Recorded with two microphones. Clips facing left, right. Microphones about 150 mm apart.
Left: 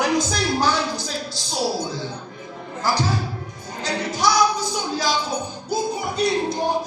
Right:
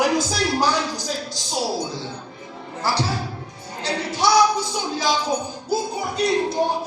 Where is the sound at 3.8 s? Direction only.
30° right (ahead or behind).